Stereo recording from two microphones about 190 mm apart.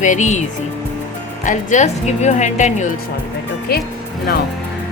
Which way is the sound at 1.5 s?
40° left (ahead or behind).